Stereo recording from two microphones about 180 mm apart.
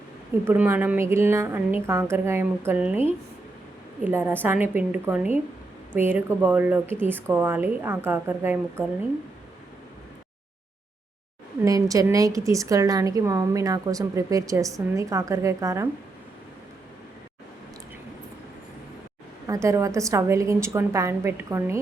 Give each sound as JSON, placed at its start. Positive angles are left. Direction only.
{"t": 0.4, "sound": "a woman's voice", "side_deg": -10}
{"t": 4.0, "sound": "a woman's voice", "side_deg": -10}
{"t": 11.6, "sound": "a woman's voice", "side_deg": -20}
{"t": 19.5, "sound": "a woman's voice", "side_deg": -15}